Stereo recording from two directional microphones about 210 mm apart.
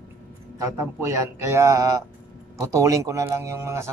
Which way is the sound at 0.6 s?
15° right (ahead or behind).